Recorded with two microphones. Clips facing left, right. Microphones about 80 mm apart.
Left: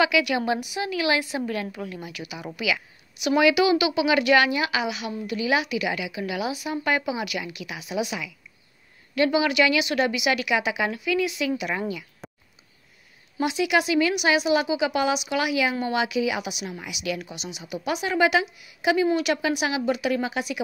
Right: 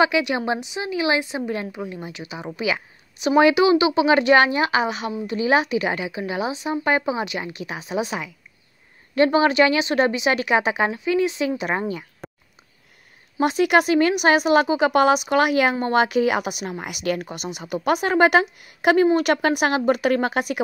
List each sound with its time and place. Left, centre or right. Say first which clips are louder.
0.0 s a woman's voice: right 2 dB; right
11.9 s a sound: right 3 dB; right
13.4 s speech: right 5 dB; right